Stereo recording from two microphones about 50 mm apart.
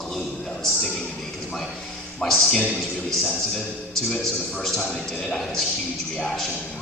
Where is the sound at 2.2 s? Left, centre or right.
Centre.